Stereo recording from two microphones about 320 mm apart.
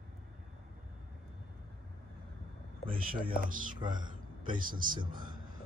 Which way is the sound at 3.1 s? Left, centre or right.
Right.